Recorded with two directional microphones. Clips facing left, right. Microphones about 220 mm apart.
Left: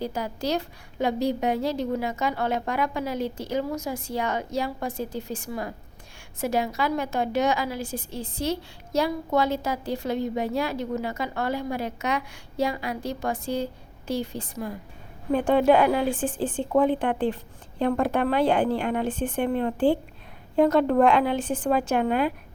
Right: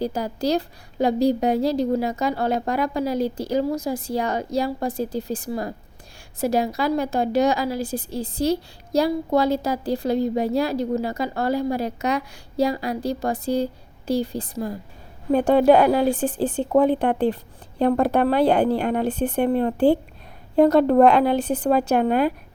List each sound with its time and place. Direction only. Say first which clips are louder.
0.0 s a woman's voice: right 5 dB; 35° right (ahead or behind)